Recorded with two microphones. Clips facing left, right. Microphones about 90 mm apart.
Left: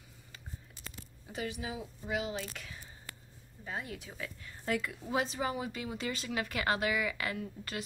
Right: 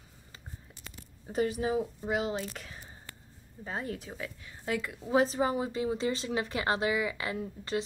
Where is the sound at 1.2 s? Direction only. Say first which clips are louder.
Right 9 dB; 40° right (ahead or behind).